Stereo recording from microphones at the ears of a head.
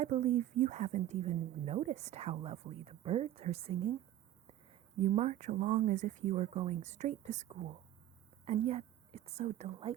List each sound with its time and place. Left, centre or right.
0.0 s a woman's voice: right